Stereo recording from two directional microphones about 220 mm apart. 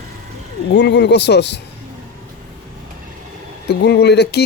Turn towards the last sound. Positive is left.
turn(degrees=50)  # may be behind; listen again after turning